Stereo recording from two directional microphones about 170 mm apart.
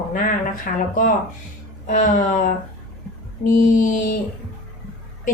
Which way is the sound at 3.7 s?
50° left (ahead or behind).